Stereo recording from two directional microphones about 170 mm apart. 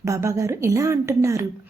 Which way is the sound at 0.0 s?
15° right (ahead or behind).